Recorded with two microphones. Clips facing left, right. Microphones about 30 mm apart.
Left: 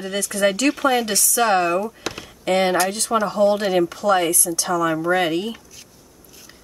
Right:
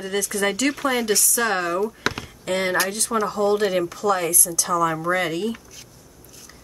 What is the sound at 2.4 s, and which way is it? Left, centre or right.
Speech, left.